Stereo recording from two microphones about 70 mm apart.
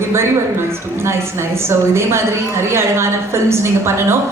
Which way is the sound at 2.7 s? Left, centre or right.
Right.